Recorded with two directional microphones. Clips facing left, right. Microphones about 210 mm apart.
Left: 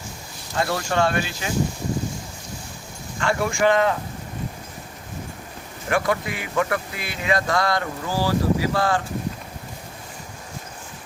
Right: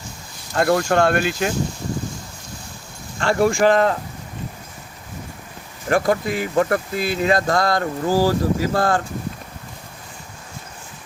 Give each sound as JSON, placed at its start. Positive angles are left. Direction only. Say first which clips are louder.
{"t": 0.5, "sound": "speech", "louder": "right 6 dB", "side_deg": -55}
{"t": 3.2, "sound": "speech", "louder": "right 5 dB", "side_deg": -35}
{"t": 5.9, "sound": "speech", "louder": "right 4 dB", "side_deg": -40}